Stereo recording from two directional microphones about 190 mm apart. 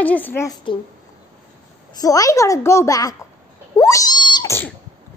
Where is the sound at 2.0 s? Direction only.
20° left (ahead or behind).